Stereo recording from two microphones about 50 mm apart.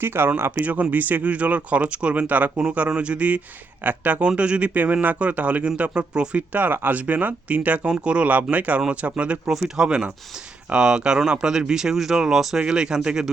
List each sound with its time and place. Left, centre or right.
0.0 s speech: right
0.6 s a man's voice: right
8.3 s a man's voice: right
9.5 s speech: centre